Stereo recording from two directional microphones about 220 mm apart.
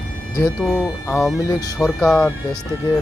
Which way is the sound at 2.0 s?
5° left (ahead or behind).